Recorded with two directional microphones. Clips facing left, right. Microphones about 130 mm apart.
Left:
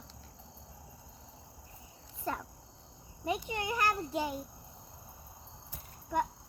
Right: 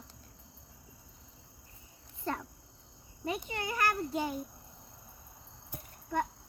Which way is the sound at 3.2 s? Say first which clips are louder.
Left 2 dB; 20° left (ahead or behind).